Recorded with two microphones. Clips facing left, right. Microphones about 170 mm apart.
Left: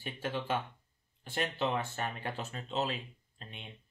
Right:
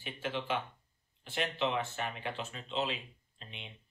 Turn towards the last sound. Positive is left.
turn(degrees=45)  # may be behind; listen again after turning